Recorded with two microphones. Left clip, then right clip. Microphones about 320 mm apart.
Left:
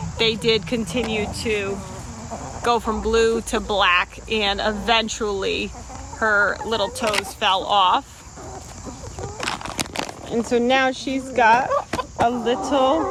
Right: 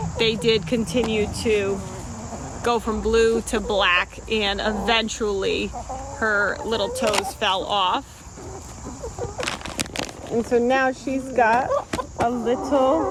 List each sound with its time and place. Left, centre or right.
0.2 s speech: centre
9.4 s a sound: centre
10.5 s speech: left